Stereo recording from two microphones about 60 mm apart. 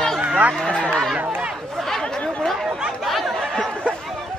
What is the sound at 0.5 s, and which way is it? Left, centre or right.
Speech, centre.